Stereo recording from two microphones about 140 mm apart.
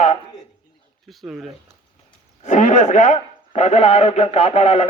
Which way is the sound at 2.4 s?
60° left (ahead or behind).